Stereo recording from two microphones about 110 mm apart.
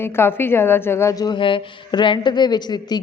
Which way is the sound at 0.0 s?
20° left (ahead or behind).